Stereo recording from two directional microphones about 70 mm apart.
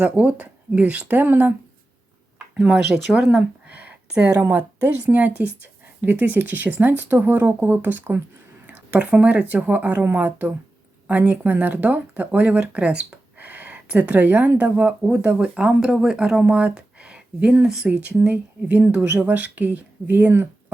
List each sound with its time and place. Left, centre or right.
0.0 s speech: centre
2.6 s speech: centre
2.9 s speech: right
5.1 s speech: right
15.5 s speech: centre; by 20.5 s right